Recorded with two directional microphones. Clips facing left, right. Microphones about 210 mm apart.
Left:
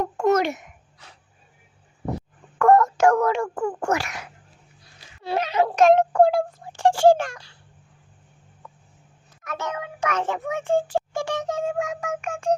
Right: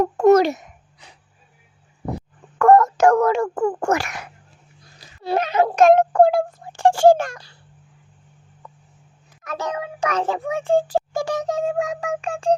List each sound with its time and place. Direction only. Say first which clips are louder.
0.2 s a child's voice: right 7 dB; 35° right (ahead or behind)
1.0 s a sound: right 1 dB; 15° right (ahead or behind)
2.6 s a child's voice: right 3 dB; 45° right (ahead or behind)
4.8 s speech: right 4 dB; 40° right (ahead or behind)
9.4 s a child's voice: right 3 dB; 35° right (ahead or behind)